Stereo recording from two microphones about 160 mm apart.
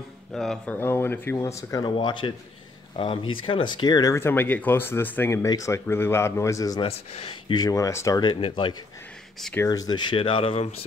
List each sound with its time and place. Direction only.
0.3 s speech: 5° left (ahead or behind)
0.7 s speech: 15° left (ahead or behind)
6.8 s speech: 35° left (ahead or behind)
9.4 s speech: 10° left (ahead or behind)
9.7 s speech: 25° left (ahead or behind)